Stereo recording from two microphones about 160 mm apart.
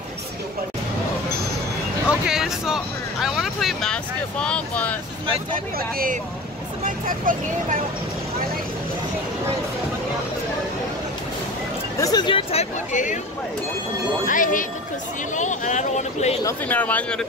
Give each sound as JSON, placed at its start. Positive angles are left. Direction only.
{"t": 2.0, "sound": "speech", "side_deg": -5}
{"t": 5.5, "sound": "speech", "side_deg": -60}
{"t": 12.0, "sound": "speech", "side_deg": 25}
{"t": 14.2, "sound": "speech", "side_deg": 55}
{"t": 16.4, "sound": "speech", "side_deg": 10}